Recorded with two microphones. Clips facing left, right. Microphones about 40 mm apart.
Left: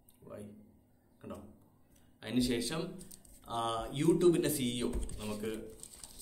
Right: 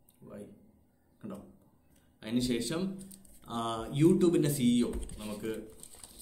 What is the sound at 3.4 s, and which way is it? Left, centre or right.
Speech, centre.